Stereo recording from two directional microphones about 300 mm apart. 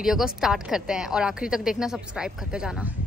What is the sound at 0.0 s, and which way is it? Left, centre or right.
A woman's voice, centre.